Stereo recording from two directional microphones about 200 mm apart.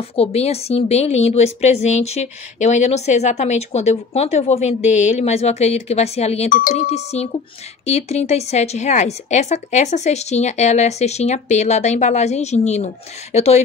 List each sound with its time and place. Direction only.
0.1 s a woman's voice: 30° left (ahead or behind)